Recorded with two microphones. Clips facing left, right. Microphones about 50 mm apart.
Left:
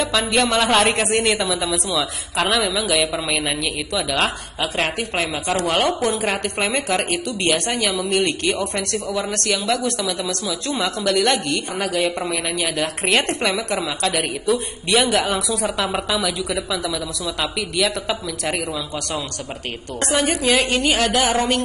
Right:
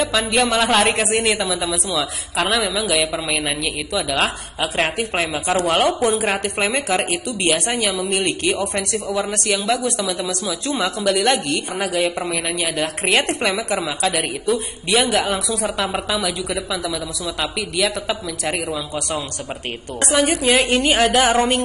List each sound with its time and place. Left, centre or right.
0.0 s a woman's voice: centre
9.0 s a woman's voice: right
9.3 s a woman's voice: centre
20.1 s a woman's voice: centre
20.5 s a woman's voice: right